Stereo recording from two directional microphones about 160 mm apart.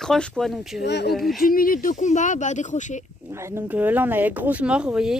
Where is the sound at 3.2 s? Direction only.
15° right (ahead or behind).